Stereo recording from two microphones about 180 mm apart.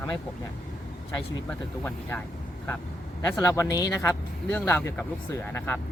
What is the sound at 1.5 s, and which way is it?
Speech, 10° left (ahead or behind).